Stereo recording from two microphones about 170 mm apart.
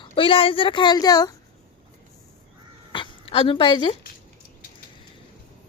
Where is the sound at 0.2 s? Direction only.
30° left (ahead or behind).